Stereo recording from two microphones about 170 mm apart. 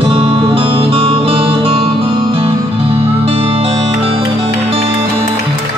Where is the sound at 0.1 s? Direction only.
30° right (ahead or behind).